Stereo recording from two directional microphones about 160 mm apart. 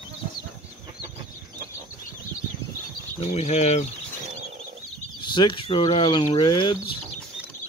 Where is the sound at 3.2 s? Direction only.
40° left (ahead or behind).